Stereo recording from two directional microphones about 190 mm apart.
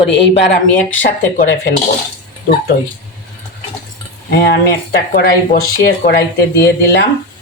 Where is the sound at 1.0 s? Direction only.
50° left (ahead or behind).